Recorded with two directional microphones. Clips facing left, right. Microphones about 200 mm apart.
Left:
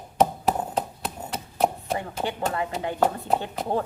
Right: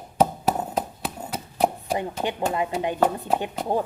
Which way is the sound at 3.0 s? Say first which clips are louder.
Even; centre (ahead or behind).